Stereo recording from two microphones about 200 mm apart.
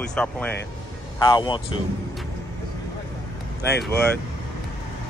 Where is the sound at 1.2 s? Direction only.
20° left (ahead or behind).